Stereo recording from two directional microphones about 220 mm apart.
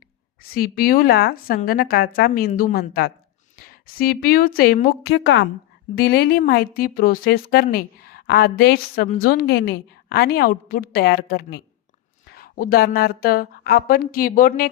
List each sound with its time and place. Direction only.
0.4 s a woman's voice: 40° left (ahead or behind)